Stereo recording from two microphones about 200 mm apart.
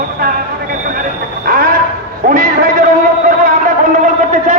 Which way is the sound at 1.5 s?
45° right (ahead or behind).